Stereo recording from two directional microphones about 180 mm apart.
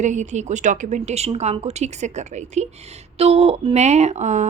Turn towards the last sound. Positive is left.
turn(degrees=-40)  # may be behind; listen again after turning